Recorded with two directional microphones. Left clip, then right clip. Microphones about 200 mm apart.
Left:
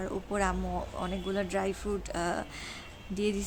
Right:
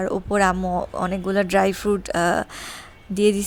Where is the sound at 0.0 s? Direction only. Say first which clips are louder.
Right 12 dB; 45° right (ahead or behind).